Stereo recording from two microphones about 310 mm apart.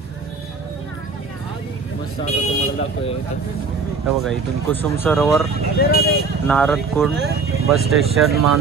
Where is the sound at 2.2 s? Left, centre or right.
Left.